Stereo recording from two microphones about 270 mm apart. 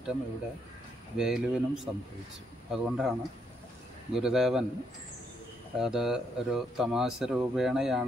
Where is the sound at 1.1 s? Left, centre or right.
Centre.